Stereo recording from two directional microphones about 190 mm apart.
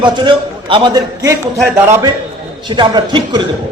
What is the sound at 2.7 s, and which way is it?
Speech, 20° right (ahead or behind).